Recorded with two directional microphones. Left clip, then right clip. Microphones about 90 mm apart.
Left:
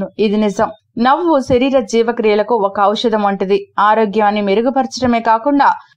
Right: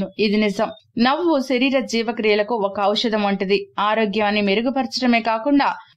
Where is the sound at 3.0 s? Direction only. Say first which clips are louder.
Left 6 dB; centre (ahead or behind).